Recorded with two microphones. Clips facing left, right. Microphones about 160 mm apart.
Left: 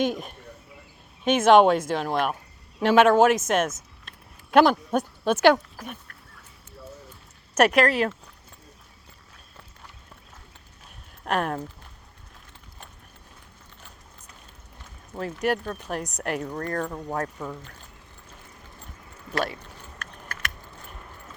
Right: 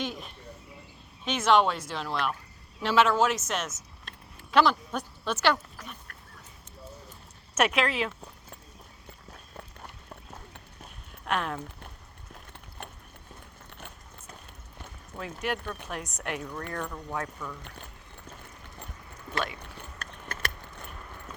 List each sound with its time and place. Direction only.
0.0 s speech: 50° left (ahead or behind)
7.5 s speech: 40° left (ahead or behind)
11.3 s speech: 50° left (ahead or behind)
13.7 s a sound: 60° right (ahead or behind)
15.2 s speech: 45° left (ahead or behind)
16.6 s speech: 50° left (ahead or behind)
17.2 s speech: 40° left (ahead or behind)
20.0 s a sound: 30° right (ahead or behind)